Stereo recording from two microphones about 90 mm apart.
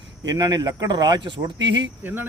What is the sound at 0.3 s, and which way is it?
A man's voice, 50° right (ahead or behind).